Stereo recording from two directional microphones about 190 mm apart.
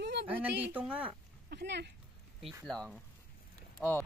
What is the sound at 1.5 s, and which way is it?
Speech, 60° right (ahead or behind).